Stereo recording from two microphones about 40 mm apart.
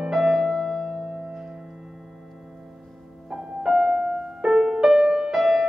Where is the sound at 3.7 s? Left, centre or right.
Right.